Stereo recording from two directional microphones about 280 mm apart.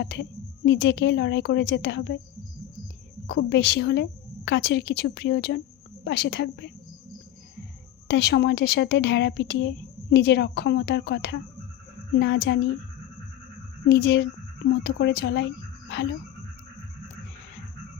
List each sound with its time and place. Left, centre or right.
0.0 s a woman's voice: left
3.2 s a woman's voice: left
8.0 s a woman's voice: left
13.8 s a woman's voice: left